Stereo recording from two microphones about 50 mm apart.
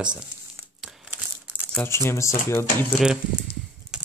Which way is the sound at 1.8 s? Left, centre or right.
Left.